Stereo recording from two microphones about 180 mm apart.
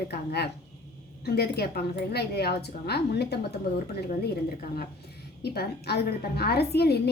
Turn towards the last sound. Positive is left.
turn(degrees=65)  # may be behind; listen again after turning